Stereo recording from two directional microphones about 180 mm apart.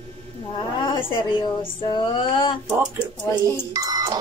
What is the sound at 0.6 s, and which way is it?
A woman's voice, 25° left (ahead or behind).